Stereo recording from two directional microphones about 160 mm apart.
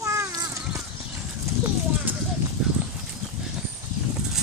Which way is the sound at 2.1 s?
10° right (ahead or behind).